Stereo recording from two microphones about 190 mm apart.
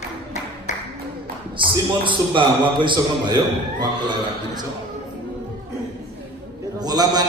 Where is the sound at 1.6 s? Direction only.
25° right (ahead or behind).